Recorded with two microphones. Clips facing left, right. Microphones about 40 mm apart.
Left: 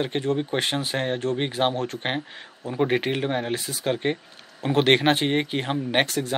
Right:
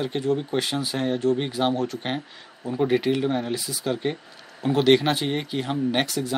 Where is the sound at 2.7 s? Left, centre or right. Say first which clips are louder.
Right 1 dB; left.